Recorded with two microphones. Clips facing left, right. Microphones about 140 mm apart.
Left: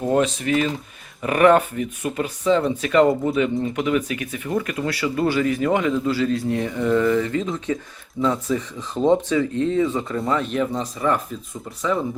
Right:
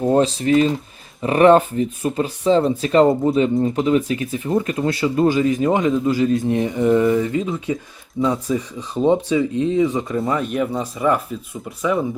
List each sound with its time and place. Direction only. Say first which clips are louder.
0.0 s speech: right 3 dB; 30° right (ahead or behind); by 11.2 s 5° right (ahead or behind)